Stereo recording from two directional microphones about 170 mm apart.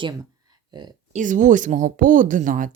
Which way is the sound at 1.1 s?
50° right (ahead or behind).